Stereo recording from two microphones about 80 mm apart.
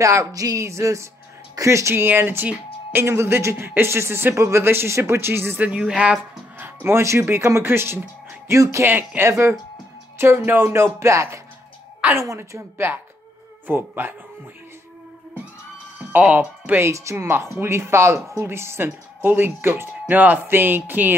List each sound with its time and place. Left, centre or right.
0.0 s speech: right
5.7 s speech: centre
6.6 s speech: right
8.5 s speech: right
8.8 s speech: right
9.3 s speech: right
10.1 s speech: right
16.1 s speech: centre
16.8 s speech: right